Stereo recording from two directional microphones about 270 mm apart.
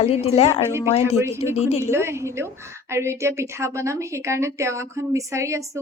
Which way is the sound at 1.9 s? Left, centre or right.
Centre.